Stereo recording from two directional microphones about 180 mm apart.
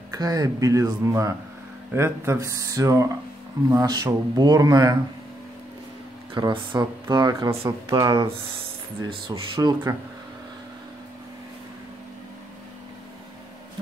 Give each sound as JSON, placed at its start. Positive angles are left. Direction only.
{"t": 0.1, "sound": "speech", "side_deg": -20}
{"t": 6.3, "sound": "speech", "side_deg": -25}